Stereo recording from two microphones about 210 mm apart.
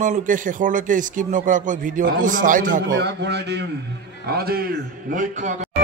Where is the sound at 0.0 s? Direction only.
40° right (ahead or behind).